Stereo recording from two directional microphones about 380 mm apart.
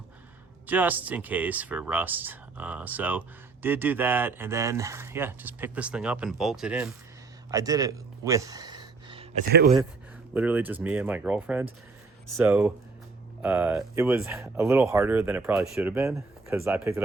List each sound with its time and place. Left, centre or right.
0.7 s speech: centre
7.5 s a sound: centre
9.5 s speech: right
10.3 s speech: centre